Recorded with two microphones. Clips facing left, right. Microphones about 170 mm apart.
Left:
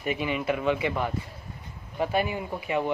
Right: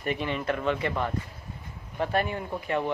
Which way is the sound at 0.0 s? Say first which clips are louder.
Left 1 dB; 5° left (ahead or behind).